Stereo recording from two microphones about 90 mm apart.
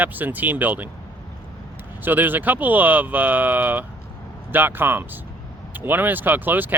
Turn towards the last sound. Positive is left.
turn(degrees=-20)  # may be behind; listen again after turning